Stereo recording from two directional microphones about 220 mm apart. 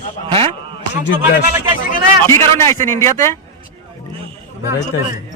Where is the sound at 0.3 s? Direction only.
25° right (ahead or behind).